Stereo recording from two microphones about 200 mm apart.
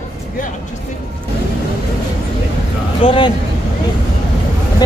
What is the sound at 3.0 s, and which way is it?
Speech, 25° left (ahead or behind).